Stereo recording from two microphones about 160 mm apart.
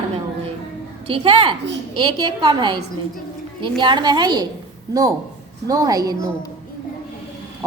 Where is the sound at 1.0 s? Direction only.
35° right (ahead or behind).